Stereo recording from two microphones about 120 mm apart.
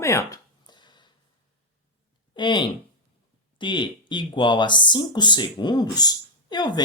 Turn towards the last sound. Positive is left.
turn(degrees=40)  # may be behind; listen again after turning